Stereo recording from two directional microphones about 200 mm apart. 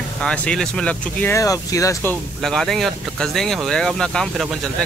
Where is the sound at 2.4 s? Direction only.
Centre (ahead or behind).